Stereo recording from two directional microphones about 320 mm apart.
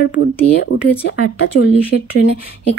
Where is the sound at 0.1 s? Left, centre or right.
Left.